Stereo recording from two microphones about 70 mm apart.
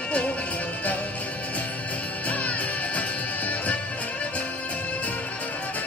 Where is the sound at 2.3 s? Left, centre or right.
Left.